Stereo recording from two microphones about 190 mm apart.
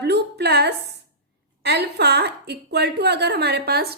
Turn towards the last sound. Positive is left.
turn(degrees=-55)  # may be behind; listen again after turning